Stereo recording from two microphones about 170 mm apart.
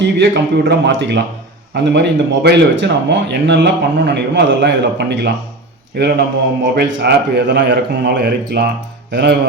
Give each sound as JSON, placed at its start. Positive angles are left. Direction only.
{"t": 0.0, "sound": "speech", "side_deg": -90}
{"t": 5.9, "sound": "mantra", "side_deg": -75}
{"t": 6.7, "sound": "speech", "side_deg": -85}
{"t": 9.1, "sound": "mantra", "side_deg": -70}